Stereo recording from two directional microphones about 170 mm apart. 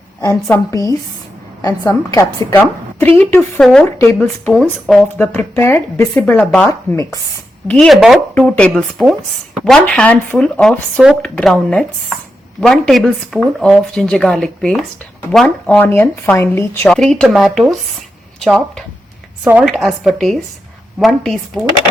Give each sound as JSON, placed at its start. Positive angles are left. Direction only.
{"t": 0.2, "sound": "a woman's voice", "side_deg": 20}
{"t": 3.6, "sound": "speech", "side_deg": 0}
{"t": 3.9, "sound": "speech", "side_deg": 15}
{"t": 6.7, "sound": "a woman's voice", "side_deg": 20}
{"t": 7.7, "sound": "speech", "side_deg": 0}